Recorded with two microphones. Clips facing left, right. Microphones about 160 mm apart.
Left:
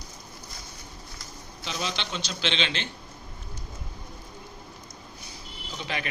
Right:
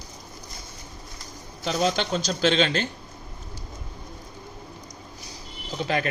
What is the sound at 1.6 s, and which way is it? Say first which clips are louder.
Speech: right 9 dB; 45° right (ahead or behind).